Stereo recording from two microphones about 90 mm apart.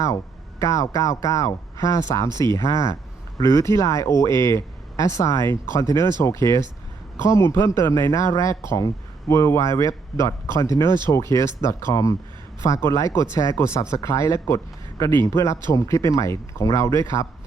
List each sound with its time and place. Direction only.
0.6 s speech: 35° left (ahead or behind)